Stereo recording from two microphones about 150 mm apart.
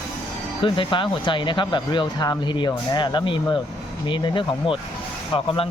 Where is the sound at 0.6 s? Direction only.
35° left (ahead or behind).